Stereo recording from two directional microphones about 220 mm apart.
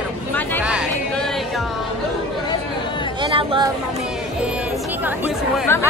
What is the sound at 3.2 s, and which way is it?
Chatter, 25° right (ahead or behind).